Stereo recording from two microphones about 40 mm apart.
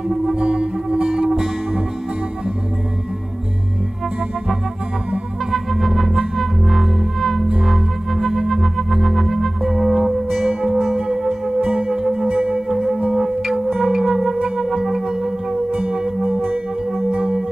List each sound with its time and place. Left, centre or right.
0.3 s music: right
5.5 s chirp tone: centre
7.6 s music: centre
11.8 s music: centre
12.3 s music: right
12.6 s music: centre
14.6 s singing bowl: centre
17.1 s music: right